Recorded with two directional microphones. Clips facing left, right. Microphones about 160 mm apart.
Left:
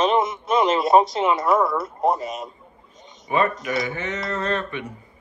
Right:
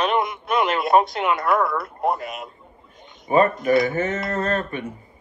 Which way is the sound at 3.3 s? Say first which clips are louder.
Right 5 dB; 45° right (ahead or behind).